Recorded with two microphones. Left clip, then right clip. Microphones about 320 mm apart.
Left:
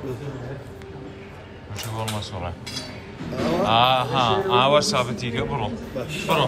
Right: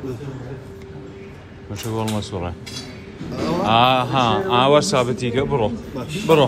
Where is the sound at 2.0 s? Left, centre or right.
Centre.